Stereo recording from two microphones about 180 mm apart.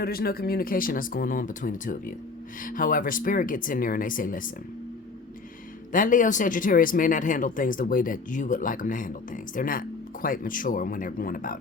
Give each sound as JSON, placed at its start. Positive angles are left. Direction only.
{"t": 0.0, "sound": "speech", "side_deg": 60}
{"t": 5.9, "sound": "speech", "side_deg": 45}